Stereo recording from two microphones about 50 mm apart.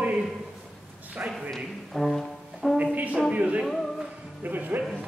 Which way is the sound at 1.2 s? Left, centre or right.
Right.